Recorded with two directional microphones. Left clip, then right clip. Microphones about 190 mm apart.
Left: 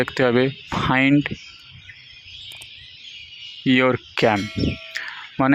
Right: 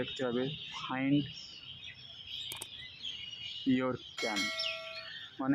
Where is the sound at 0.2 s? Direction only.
45° left (ahead or behind).